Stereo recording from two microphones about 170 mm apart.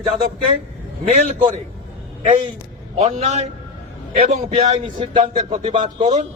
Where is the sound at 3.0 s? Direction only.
40° right (ahead or behind).